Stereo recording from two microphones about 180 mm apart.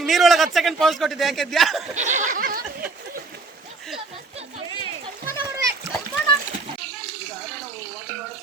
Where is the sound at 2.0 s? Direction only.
40° right (ahead or behind).